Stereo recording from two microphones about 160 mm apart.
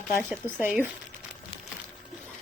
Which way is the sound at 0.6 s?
10° right (ahead or behind).